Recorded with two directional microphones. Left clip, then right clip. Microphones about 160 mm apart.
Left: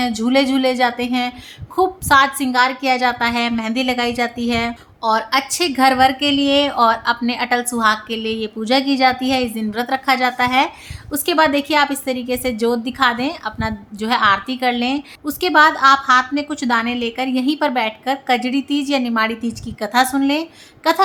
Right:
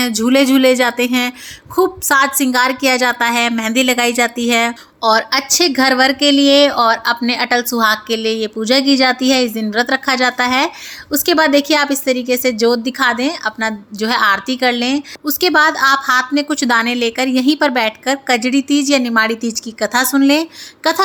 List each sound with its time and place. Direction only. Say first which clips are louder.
0.3 s a woman's voice: right 5 dB; 20° right (ahead or behind)
19.4 s a woman's voice: right 5 dB; 30° left (ahead or behind)
19.8 s a woman's voice: right 2 dB; 20° right (ahead or behind)